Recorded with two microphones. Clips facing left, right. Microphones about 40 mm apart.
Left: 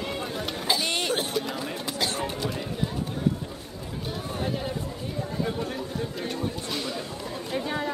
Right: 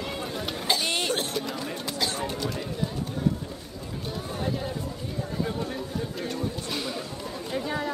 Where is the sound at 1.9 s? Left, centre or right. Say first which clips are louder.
Left 1 dB; left.